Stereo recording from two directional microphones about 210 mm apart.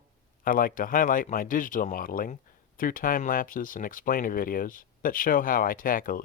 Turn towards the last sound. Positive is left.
turn(degrees=40)  # may be behind; listen again after turning